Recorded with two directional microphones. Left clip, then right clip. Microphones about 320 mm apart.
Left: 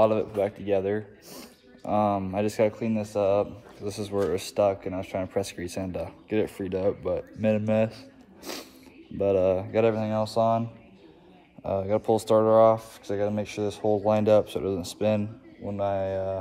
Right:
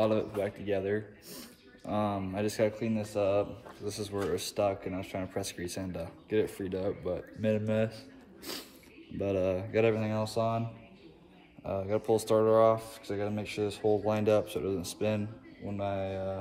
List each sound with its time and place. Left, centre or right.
0.0 s speech: centre
11.6 s speech: left